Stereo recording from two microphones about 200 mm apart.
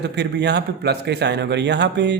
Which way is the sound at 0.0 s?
55° right (ahead or behind).